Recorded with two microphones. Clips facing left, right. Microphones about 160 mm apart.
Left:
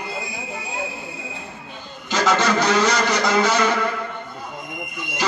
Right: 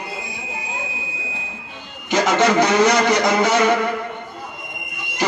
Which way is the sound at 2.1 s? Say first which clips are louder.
Right 3 dB; 20° right (ahead or behind).